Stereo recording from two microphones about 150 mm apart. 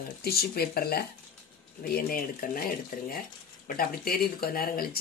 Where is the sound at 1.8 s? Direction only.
80° left.